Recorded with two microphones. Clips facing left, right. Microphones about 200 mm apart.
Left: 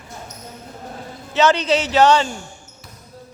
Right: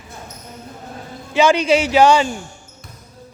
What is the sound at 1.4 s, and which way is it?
Speech, 10° right (ahead or behind).